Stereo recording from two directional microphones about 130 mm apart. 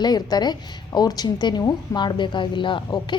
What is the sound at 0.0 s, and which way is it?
Speech, 30° left (ahead or behind).